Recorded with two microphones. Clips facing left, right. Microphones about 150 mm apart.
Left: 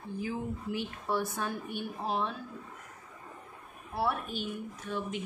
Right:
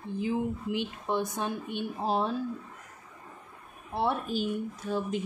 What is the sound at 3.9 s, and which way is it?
A woman's voice, 30° right (ahead or behind).